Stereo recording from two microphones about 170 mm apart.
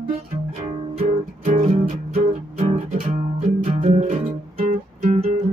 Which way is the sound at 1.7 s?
45° right (ahead or behind).